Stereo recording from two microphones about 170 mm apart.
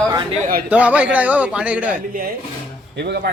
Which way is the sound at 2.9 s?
80° right.